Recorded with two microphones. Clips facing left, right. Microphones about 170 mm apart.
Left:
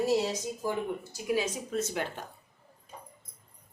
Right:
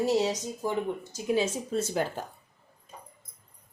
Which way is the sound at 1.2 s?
25° right (ahead or behind).